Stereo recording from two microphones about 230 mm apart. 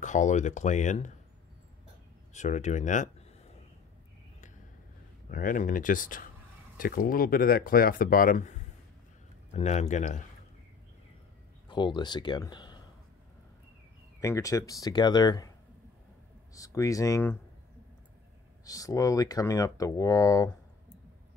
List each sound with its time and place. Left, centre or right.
0.0 s speech: left
2.3 s speech: left
5.3 s speech: left
11.7 s speech: centre
14.2 s speech: centre
16.5 s speech: centre
18.7 s speech: centre